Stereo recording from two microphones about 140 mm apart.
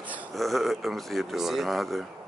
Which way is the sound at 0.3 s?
Centre (ahead or behind).